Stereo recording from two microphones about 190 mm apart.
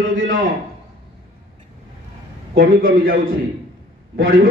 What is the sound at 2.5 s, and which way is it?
A man's voice, 50° right (ahead or behind).